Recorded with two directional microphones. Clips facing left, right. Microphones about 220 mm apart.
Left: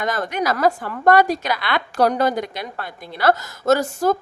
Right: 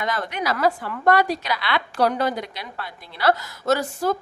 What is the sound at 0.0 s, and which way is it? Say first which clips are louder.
A woman's voice: left 4 dB; 45° left (ahead or behind).